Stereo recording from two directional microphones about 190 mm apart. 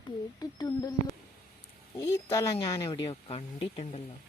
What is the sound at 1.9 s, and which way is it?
Speech, 15° left (ahead or behind).